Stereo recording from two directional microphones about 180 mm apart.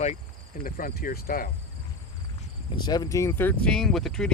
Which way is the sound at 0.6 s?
55° left (ahead or behind).